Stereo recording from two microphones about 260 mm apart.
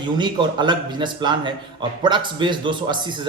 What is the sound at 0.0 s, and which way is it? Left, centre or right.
A man's voice, centre.